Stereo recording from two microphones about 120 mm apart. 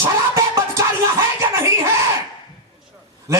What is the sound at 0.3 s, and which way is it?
Music, 25° right (ahead or behind).